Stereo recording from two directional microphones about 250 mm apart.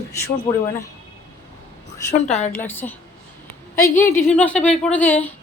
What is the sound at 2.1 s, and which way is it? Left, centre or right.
Speech, left.